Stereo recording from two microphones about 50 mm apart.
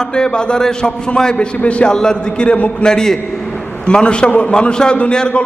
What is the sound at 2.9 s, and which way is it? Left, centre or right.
A man's voice, centre.